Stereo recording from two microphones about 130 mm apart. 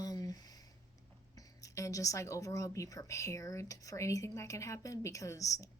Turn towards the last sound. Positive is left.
turn(degrees=25)  # may be behind; listen again after turning